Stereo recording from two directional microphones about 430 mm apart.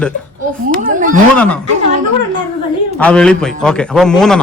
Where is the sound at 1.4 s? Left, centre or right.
Centre.